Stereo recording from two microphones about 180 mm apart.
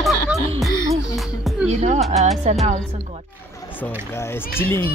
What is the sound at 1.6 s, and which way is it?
Music, 40° right (ahead or behind).